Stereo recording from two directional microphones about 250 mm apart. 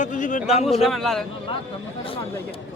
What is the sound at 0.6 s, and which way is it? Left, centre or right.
Speech, centre.